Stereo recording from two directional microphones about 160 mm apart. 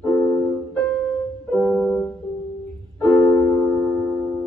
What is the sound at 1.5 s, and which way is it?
Music, 5° left (ahead or behind).